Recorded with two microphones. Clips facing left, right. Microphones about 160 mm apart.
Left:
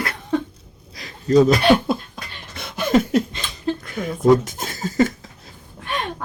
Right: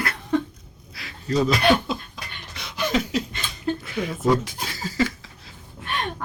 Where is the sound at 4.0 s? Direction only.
45° left (ahead or behind).